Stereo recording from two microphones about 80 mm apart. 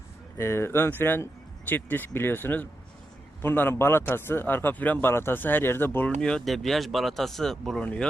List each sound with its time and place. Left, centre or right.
0.3 s speech: left
6.1 s speech: centre